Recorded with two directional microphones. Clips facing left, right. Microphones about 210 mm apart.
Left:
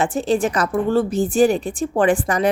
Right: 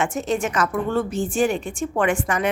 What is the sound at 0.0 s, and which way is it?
A woman's voice, 30° left (ahead or behind).